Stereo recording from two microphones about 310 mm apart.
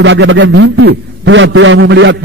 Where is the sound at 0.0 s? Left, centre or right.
Right.